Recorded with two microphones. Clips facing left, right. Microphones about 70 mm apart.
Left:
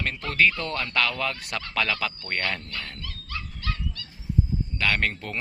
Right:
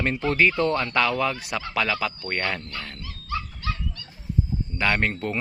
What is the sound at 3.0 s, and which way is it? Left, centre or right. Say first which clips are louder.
Dog: right 6 dB; centre.